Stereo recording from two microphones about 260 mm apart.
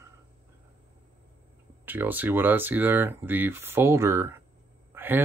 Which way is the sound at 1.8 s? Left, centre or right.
Centre.